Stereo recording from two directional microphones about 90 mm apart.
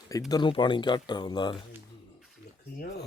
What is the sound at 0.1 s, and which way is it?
Speech, 40° left (ahead or behind).